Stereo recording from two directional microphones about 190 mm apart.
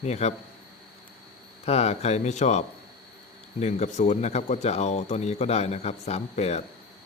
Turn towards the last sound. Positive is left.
turn(degrees=35)  # may be behind; listen again after turning